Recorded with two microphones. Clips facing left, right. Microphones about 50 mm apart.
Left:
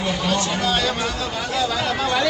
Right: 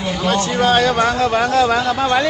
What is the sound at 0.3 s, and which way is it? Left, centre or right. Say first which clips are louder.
A man's voice: right 8 dB; right.